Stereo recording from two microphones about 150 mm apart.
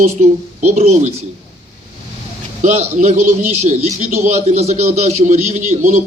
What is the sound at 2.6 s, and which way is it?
A man's voice, 50° right (ahead or behind).